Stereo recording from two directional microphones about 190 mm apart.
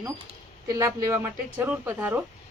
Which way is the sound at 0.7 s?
15° right (ahead or behind).